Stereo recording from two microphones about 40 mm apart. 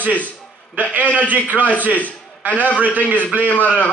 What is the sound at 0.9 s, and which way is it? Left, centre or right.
Speech, right.